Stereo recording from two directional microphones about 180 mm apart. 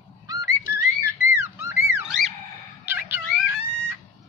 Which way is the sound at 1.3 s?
15° right (ahead or behind).